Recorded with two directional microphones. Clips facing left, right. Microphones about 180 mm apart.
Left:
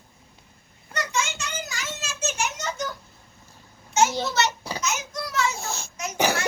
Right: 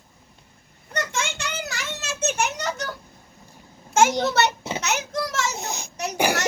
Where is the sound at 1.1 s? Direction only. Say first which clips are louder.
Even; 65° right (ahead or behind).